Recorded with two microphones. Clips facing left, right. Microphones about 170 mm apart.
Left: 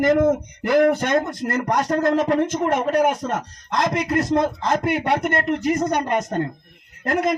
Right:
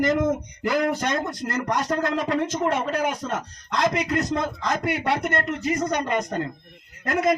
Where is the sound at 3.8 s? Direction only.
50° left (ahead or behind).